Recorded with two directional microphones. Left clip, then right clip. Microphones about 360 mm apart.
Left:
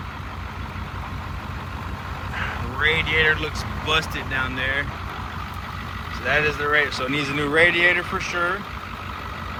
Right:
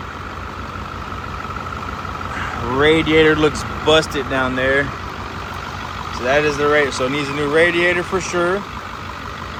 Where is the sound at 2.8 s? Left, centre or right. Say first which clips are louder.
Right 6 dB; centre.